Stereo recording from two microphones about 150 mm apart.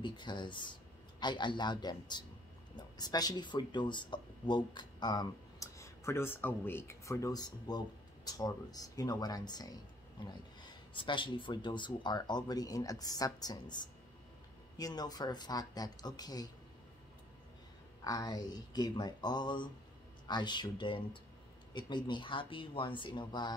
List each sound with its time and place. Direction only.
0.0 s speech: 30° left (ahead or behind)
18.0 s speech: 25° left (ahead or behind)